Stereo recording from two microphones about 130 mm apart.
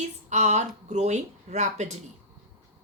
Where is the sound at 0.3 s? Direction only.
60° right (ahead or behind).